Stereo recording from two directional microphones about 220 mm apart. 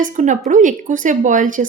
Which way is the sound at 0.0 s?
35° right (ahead or behind).